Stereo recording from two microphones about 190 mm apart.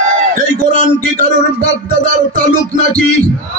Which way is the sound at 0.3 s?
50° right (ahead or behind).